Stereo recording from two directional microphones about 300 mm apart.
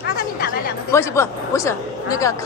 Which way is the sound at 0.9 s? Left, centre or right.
Centre.